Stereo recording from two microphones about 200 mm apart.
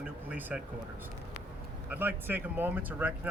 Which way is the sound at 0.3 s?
5° right (ahead or behind).